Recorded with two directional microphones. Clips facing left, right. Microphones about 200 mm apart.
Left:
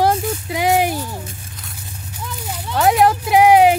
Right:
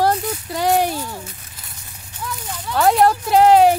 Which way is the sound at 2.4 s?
5° left (ahead or behind).